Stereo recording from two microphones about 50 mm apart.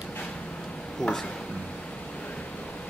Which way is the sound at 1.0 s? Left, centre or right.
Centre.